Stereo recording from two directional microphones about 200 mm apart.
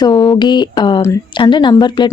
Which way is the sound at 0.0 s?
20° left (ahead or behind).